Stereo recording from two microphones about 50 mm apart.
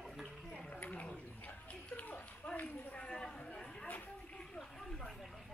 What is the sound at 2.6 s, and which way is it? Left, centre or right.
Chatter, left.